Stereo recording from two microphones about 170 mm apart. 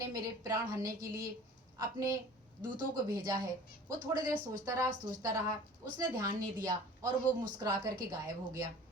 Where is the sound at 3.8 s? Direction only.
20° right (ahead or behind).